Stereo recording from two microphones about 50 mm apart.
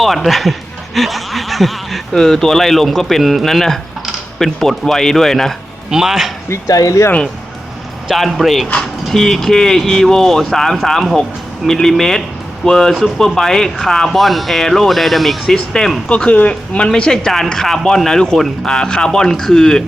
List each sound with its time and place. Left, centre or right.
0.0 s speech: centre
5.9 s a man's voice: centre
6.5 s speech: left
8.1 s speech: centre
15.5 s speech: centre
16.0 s speech: left